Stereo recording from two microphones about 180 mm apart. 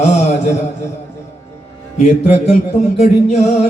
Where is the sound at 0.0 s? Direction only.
40° left (ahead or behind).